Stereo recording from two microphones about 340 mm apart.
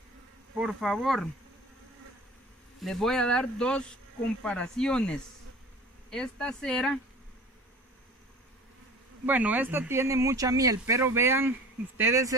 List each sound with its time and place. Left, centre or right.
0.6 s speech: centre
2.8 s speech: centre
9.2 s speech: centre